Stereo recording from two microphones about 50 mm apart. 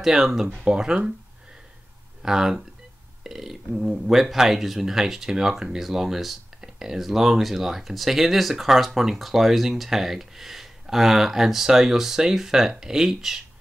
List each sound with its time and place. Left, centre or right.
0.0 s speech: centre
2.2 s speech: centre